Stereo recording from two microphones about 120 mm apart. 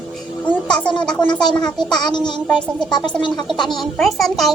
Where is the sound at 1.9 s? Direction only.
40° left (ahead or behind).